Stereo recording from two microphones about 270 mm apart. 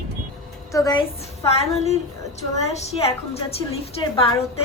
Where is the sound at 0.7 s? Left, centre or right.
Centre.